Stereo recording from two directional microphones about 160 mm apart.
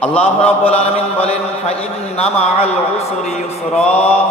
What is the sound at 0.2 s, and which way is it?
A man's voice, 40° left (ahead or behind).